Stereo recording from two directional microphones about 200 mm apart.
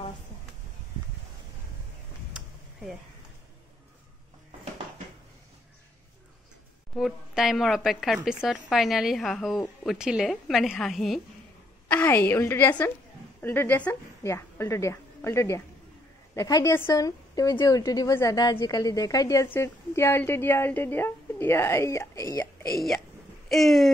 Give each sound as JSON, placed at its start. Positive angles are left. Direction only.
{"t": 2.3, "sound": "a sound", "side_deg": 0}
{"t": 7.0, "sound": "a woman's voice", "side_deg": 0}
{"t": 23.5, "sound": "a woman's voice", "side_deg": 0}